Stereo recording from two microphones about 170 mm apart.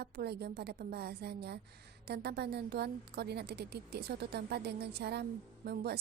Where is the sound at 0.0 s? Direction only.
70° right (ahead or behind).